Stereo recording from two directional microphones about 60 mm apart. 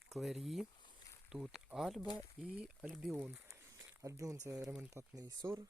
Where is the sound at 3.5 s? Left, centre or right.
Right.